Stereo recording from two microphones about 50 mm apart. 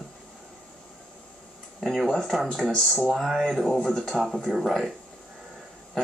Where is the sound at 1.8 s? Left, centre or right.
Centre.